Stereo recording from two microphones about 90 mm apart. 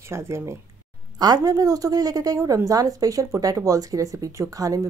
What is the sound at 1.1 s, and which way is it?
A woman's voice, 45° right (ahead or behind).